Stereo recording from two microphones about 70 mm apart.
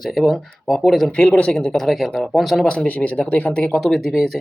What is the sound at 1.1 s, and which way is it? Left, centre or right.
Speech, centre.